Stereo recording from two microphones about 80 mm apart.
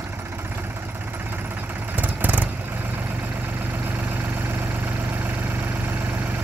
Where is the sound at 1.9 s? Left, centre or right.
Right.